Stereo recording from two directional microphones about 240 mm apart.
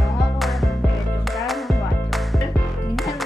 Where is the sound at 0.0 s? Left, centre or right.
Centre.